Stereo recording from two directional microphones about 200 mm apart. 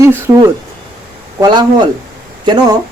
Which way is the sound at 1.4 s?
20° right (ahead or behind).